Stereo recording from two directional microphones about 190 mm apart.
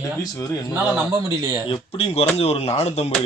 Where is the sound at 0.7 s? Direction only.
15° right (ahead or behind).